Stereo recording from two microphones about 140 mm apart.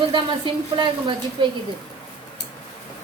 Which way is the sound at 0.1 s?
35° right (ahead or behind).